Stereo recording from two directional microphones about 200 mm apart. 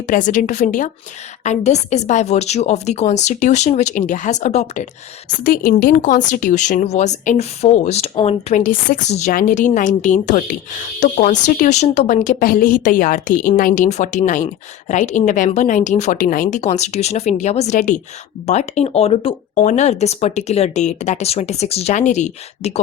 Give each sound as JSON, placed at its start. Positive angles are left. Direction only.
{"t": 0.1, "sound": "speech", "side_deg": 40}
{"t": 5.4, "sound": "speech", "side_deg": 45}